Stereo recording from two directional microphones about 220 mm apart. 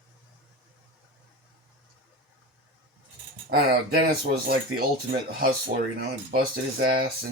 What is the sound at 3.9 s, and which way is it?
Speech, 45° right (ahead or behind).